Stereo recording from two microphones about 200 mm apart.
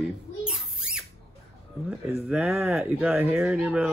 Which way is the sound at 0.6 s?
5° right (ahead or behind).